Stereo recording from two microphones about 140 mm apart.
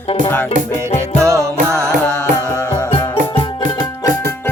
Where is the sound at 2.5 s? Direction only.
15° left (ahead or behind).